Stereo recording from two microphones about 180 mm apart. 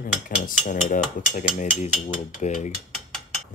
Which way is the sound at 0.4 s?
50° left (ahead or behind).